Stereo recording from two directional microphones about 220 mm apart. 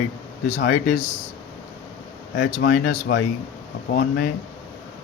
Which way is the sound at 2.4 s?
40° left (ahead or behind).